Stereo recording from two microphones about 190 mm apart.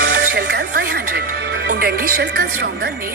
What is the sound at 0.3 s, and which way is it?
Speech, 60° right (ahead or behind).